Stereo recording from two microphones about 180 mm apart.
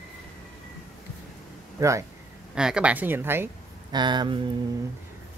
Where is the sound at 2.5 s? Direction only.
5° right (ahead or behind).